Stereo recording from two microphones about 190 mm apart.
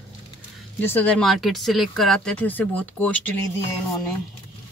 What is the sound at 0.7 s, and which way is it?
Speech, 10° left (ahead or behind).